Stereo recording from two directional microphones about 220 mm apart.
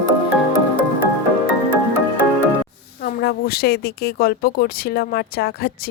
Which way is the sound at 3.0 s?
45° left (ahead or behind).